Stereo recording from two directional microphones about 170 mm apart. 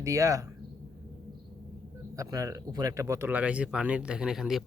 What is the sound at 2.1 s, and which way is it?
Speech, 20° right (ahead or behind).